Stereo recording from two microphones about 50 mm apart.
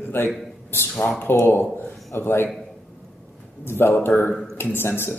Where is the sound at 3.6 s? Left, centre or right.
Left.